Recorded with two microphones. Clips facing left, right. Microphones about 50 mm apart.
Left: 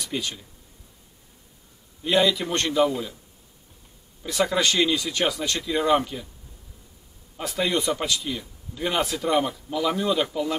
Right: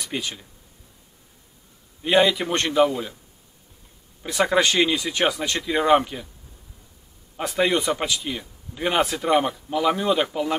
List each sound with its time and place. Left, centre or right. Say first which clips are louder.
0.1 s speech: even; centre
2.0 s speech: right 3 dB; right
4.3 s speech: right 3 dB; right
7.4 s speech: right 3 dB; right